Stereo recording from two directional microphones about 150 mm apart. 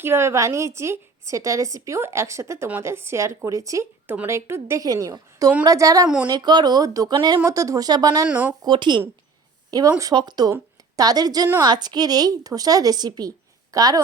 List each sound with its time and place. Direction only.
0.0 s a woman's voice: 15° right (ahead or behind)
8.3 s speech: 10° right (ahead or behind)
8.6 s speech: 30° right (ahead or behind)
10.0 s a woman's voice: 25° right (ahead or behind)